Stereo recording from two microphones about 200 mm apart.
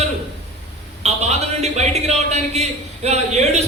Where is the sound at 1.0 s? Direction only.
35° right (ahead or behind).